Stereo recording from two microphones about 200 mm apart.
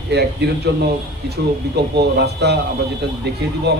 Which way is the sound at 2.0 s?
55° right (ahead or behind).